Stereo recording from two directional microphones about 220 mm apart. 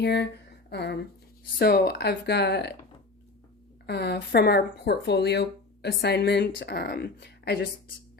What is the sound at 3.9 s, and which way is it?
Speech, 50° left (ahead or behind).